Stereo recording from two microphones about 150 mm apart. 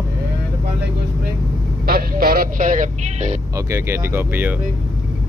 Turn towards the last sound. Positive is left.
turn(degrees=-15)  # may be behind; listen again after turning